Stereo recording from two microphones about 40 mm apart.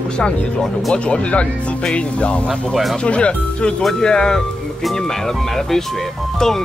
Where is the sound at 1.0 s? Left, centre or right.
Left.